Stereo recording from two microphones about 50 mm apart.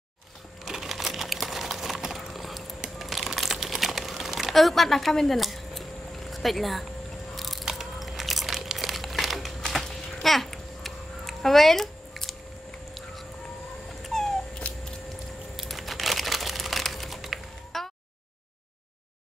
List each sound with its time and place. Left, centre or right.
0.7 s a sound: centre
3.0 s typing: centre
7.3 s crunch: centre
10.2 s babbling: centre
14.0 s cat: centre
15.5 s crumpling: centre